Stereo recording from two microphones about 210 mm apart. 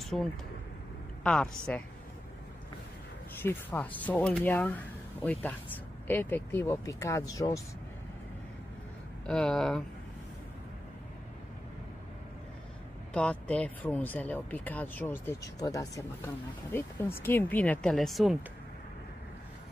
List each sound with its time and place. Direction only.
0.0 s a woman's voice: centre (ahead or behind)
3.3 s speech: 10° left (ahead or behind)
9.2 s a woman's voice: 5° left (ahead or behind)
13.1 s speech: 5° left (ahead or behind)
17.2 s a woman's voice: 10° left (ahead or behind)